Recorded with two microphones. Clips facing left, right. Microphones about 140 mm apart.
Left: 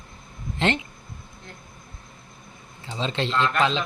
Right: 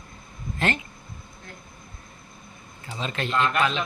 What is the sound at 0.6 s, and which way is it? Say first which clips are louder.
Speech: left 3 dB; 20° left (ahead or behind).